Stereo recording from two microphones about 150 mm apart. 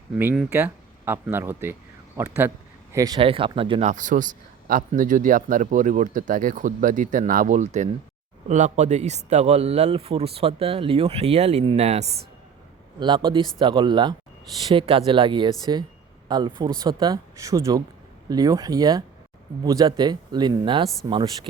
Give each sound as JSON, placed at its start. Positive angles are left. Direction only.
{"t": 0.5, "sound": "speech", "side_deg": -15}
{"t": 3.2, "sound": "speech", "side_deg": -35}
{"t": 3.9, "sound": "speech", "side_deg": -60}
{"t": 13.0, "sound": "speech", "side_deg": -30}